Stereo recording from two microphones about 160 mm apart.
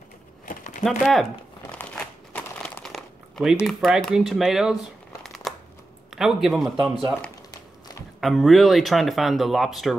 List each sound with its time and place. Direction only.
0.5 s a sound: 50° left (ahead or behind)
0.8 s speech: centre (ahead or behind)
1.7 s crumpling: 5° left (ahead or behind)
3.6 s speech: centre (ahead or behind)
8.2 s speech: centre (ahead or behind)